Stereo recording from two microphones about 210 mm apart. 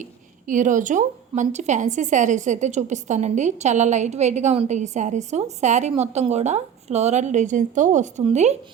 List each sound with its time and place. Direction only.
0.0 s a woman's voice: 35° right (ahead or behind)